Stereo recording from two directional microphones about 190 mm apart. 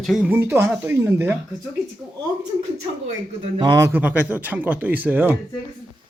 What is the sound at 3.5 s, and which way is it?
Speech, 20° right (ahead or behind).